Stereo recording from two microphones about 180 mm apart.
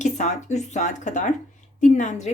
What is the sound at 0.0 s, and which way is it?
Speech, 40° left (ahead or behind).